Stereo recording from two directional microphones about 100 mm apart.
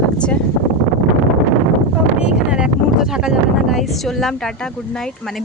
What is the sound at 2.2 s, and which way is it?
Speech, 10° right (ahead or behind).